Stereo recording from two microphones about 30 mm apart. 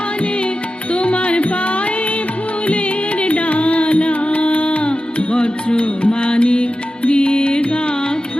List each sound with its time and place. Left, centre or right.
0.9 s music: left